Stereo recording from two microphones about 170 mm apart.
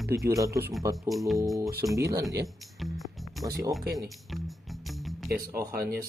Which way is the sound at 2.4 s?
Centre (ahead or behind).